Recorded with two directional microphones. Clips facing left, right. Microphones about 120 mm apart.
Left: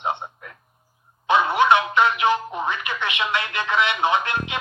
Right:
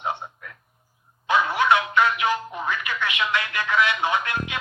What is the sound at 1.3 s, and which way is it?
Speech, 25° left (ahead or behind).